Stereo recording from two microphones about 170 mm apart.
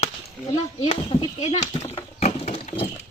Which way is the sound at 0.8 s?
30° left (ahead or behind).